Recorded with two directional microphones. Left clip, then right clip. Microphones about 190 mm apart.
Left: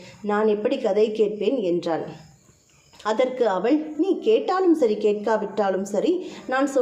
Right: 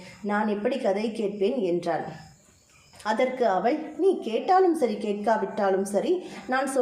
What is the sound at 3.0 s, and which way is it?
A woman's voice, 25° left (ahead or behind).